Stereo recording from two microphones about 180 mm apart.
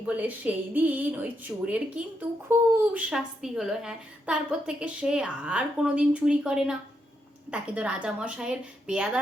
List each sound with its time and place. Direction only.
0.0 s a woman's voice: 10° right (ahead or behind)